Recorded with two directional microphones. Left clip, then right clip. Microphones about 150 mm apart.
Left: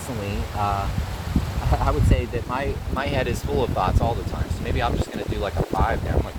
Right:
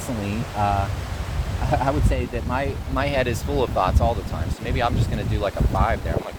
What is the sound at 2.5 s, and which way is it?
Speech, 80° right.